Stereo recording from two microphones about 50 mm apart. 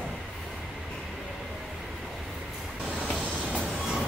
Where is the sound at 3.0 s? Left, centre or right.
Centre.